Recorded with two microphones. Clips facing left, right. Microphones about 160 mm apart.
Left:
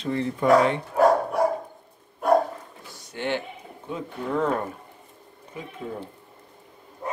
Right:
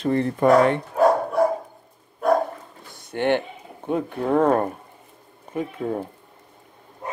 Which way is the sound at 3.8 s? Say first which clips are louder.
Right 8 dB; 55° right (ahead or behind).